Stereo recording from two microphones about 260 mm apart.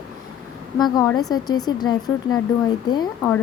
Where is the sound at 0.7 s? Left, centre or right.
Centre.